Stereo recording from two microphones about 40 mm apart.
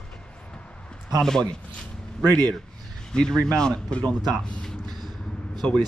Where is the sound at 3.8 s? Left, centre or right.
Left.